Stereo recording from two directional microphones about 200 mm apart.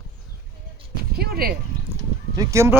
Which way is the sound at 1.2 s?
50° right (ahead or behind).